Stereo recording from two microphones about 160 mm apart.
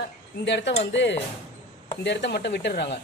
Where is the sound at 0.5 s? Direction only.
90° left.